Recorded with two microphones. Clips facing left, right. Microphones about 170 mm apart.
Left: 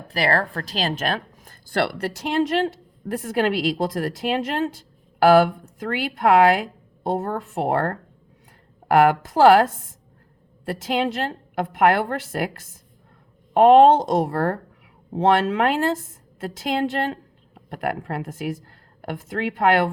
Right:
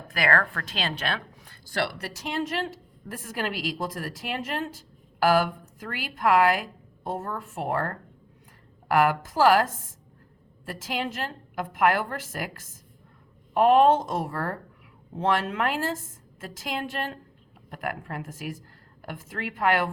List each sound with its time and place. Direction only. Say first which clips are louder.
0.1 s a woman's voice: left 4 dB; 35° left (ahead or behind)
1.7 s a woman's voice: left 6 dB; 60° left (ahead or behind)
10.7 s a woman's voice: left 8 dB; 70° left (ahead or behind)